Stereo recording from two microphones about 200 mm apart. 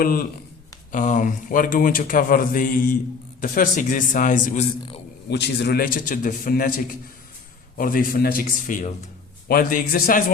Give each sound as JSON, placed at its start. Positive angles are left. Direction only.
{"t": 0.0, "sound": "a man's voice", "side_deg": 45}
{"t": 5.3, "sound": "a man's voice", "side_deg": 55}